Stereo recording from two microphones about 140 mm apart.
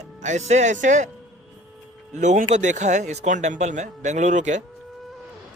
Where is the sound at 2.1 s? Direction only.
60° right (ahead or behind).